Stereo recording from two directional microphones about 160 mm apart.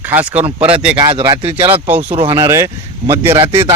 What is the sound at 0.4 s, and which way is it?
Speech, 40° right (ahead or behind).